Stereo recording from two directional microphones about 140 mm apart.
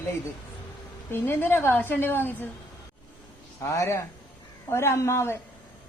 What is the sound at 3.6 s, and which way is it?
A man's voice, 20° left (ahead or behind).